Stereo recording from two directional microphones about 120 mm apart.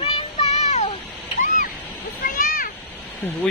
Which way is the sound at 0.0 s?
60° left (ahead or behind).